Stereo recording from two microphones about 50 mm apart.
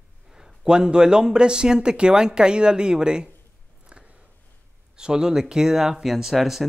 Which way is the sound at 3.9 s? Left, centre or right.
Right.